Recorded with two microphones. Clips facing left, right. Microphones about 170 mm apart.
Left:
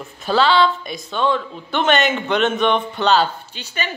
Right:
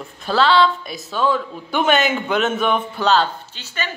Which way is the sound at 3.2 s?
15° left (ahead or behind).